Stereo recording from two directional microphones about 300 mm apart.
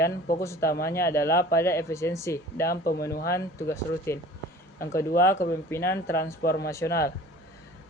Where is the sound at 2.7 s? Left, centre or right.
Left.